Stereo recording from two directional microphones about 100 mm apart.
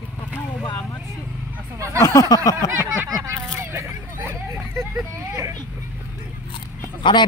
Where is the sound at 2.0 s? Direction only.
30° left (ahead or behind).